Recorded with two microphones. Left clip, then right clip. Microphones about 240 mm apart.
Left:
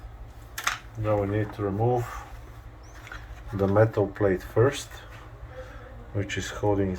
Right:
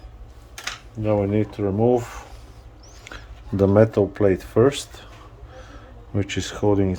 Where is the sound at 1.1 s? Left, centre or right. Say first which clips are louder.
Right 5 dB; right.